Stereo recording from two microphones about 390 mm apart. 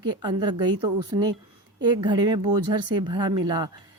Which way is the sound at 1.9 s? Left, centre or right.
Centre.